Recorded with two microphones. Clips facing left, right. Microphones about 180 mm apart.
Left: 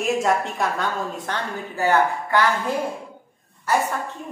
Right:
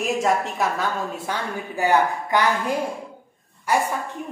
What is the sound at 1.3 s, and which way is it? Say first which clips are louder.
A woman's voice: right 1 dB; 15° right (ahead or behind).